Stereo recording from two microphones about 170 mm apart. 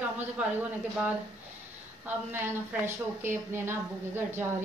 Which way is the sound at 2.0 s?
10° right (ahead or behind).